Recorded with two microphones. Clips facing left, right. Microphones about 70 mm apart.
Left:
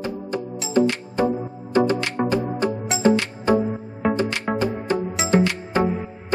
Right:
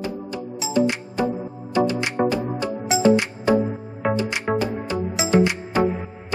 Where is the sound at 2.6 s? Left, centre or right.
Left.